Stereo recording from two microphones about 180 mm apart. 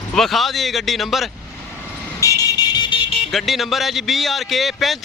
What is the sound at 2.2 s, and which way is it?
Vehicle, 20° left (ahead or behind).